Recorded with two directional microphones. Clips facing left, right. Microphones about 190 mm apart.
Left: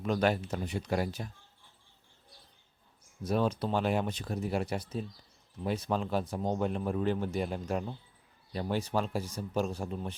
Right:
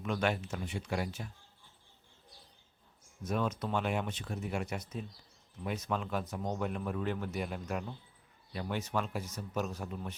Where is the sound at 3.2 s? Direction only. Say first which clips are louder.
Left 4 dB; 30° left (ahead or behind).